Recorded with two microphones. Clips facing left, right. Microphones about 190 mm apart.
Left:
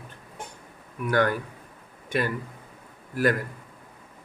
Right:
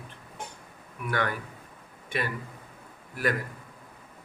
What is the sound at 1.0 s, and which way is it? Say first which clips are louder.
Speech: left 7 dB; 45° left (ahead or behind).